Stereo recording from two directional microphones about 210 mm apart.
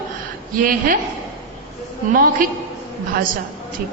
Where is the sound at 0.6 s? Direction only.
40° right (ahead or behind).